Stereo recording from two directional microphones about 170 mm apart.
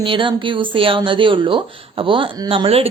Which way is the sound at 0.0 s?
30° right (ahead or behind).